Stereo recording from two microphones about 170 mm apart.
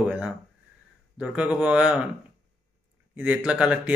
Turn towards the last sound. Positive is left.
turn(degrees=-5)  # may be behind; listen again after turning